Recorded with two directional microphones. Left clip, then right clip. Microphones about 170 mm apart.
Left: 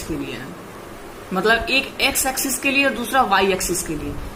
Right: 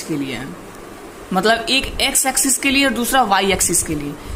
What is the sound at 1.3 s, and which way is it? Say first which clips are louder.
A woman's voice: right 2 dB; 35° right (ahead or behind).